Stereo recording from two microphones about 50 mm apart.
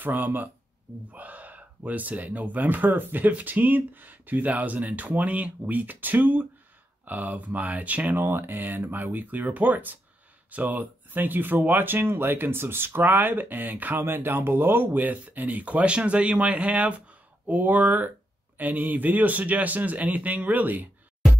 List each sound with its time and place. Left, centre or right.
0.0 s speech: right
14.0 s speech: right